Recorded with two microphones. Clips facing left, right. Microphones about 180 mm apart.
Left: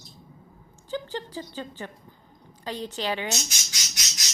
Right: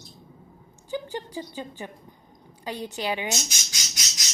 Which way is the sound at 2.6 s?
10° right (ahead or behind).